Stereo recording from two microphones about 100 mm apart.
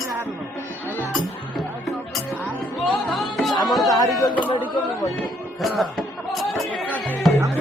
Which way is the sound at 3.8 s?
40° left (ahead or behind).